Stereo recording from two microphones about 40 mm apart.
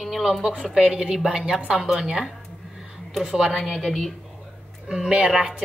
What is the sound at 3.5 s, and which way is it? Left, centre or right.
Speech, centre.